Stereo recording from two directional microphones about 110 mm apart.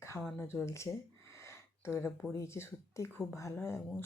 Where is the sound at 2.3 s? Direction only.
25° left (ahead or behind).